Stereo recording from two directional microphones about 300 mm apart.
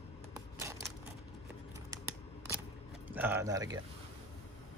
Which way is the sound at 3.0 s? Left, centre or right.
Centre.